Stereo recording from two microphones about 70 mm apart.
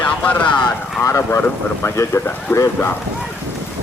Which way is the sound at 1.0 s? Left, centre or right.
Left.